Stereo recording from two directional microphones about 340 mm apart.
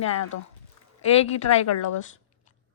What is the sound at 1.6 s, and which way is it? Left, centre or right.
Speech, left.